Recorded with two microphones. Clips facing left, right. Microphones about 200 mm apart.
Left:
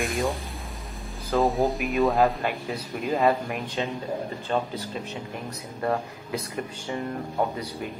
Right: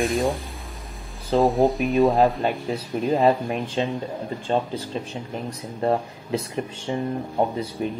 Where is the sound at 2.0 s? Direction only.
25° right (ahead or behind).